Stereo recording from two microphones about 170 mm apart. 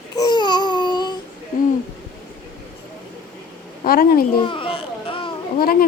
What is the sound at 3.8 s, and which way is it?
Speech, 60° left (ahead or behind).